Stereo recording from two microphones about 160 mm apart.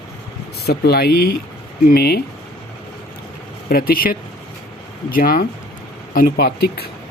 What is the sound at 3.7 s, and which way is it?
Speech, 65° left (ahead or behind).